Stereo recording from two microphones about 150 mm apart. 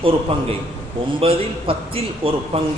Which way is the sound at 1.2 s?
40° right (ahead or behind).